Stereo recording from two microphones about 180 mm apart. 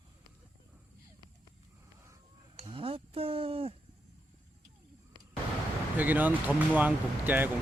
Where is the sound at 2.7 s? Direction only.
30° right (ahead or behind).